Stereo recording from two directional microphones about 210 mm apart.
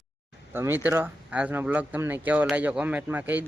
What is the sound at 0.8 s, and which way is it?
Speech, 10° right (ahead or behind).